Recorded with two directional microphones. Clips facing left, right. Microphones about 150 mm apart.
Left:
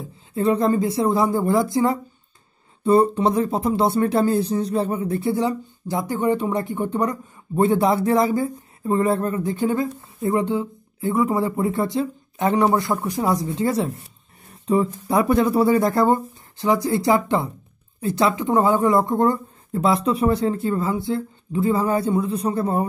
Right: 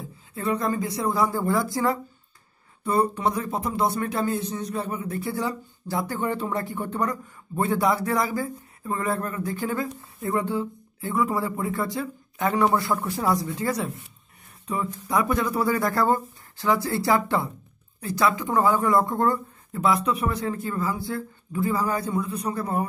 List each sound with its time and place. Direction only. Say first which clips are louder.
0.3 s speech: left 7 dB; 25° left (ahead or behind)